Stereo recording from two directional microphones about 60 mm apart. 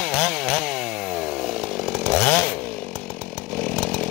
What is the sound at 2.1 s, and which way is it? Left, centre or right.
Chainsaw, centre.